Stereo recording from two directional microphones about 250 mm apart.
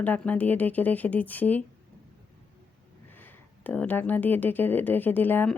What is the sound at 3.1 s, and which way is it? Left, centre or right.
Speech, centre.